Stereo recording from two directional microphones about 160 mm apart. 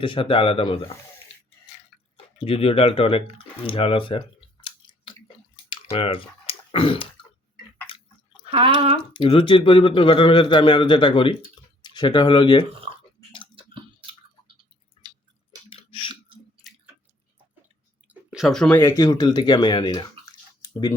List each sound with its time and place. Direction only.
0.0 s a man's voice: 30° left (ahead or behind)
2.1 s a man's voice: 35° left (ahead or behind)
5.6 s typing: 35° left (ahead or behind)
7.9 s a sound: 35° left (ahead or behind)
8.4 s speech: 35° right (ahead or behind)
9.1 s a man's voice: 35° left (ahead or behind)
12.9 s a sound: 35° right (ahead or behind)
13.7 s tick-tock: 35° right (ahead or behind)
15.0 s chewing: 25° right (ahead or behind)
15.7 s chewing: 35° left (ahead or behind)
18.1 s a sound: 5° right (ahead or behind)
18.8 s speech: 20° left (ahead or behind)